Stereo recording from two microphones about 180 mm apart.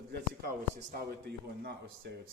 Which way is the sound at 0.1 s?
60° right (ahead or behind).